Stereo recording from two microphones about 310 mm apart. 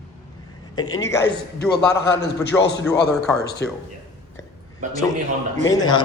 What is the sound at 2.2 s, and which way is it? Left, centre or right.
A man's voice, left.